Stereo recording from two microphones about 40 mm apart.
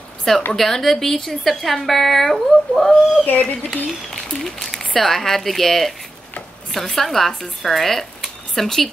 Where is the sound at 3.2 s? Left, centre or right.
Left.